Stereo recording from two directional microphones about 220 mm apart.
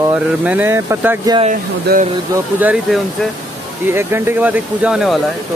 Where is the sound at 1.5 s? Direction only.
35° right (ahead or behind).